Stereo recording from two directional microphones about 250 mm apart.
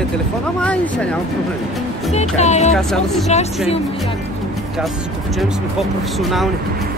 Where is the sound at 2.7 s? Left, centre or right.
Centre.